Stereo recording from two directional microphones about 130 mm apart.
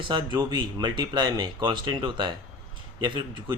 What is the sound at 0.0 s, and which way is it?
Speech, 35° right (ahead or behind).